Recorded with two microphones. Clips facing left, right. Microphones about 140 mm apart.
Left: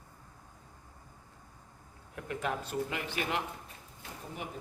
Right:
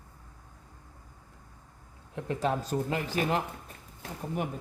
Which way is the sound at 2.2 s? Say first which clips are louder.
Right 6 dB; 30° right (ahead or behind).